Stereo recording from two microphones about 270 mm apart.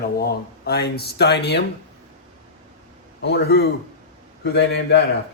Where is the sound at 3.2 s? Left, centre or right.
Left.